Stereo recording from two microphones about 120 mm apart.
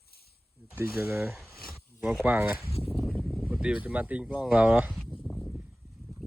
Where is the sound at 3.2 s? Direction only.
10° left (ahead or behind).